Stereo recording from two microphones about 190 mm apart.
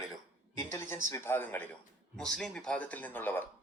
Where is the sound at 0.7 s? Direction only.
15° left (ahead or behind).